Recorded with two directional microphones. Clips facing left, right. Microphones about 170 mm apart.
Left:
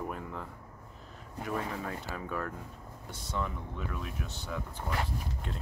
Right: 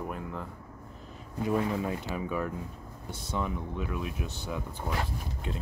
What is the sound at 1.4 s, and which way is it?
Speech, 20° right (ahead or behind).